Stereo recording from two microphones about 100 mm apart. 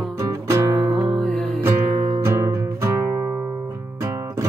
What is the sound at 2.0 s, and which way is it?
Music, 90° right.